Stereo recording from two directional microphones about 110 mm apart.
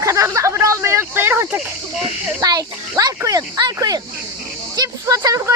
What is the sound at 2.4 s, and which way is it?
Speech, 35° right (ahead or behind).